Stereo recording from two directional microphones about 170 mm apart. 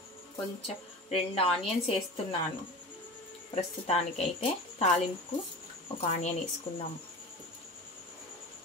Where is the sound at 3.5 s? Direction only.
40° left (ahead or behind).